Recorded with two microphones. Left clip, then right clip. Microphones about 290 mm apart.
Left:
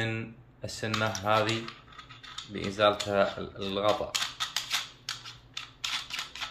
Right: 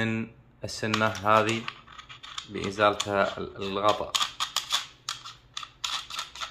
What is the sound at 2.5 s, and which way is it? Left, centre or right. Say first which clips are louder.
Speech: right 1 dB; centre.